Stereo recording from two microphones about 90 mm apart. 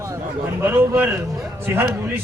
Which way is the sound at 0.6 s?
25° right (ahead or behind).